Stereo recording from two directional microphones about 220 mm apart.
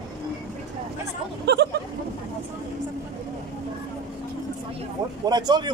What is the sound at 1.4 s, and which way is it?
Speech, 50° right (ahead or behind).